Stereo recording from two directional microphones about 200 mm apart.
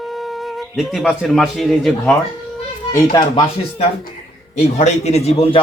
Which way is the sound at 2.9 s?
20° left (ahead or behind).